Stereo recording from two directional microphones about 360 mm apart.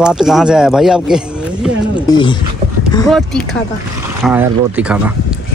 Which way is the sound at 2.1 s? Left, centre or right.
Centre.